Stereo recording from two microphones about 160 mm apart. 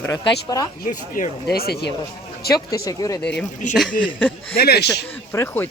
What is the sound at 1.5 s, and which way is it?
Speech, 80° left.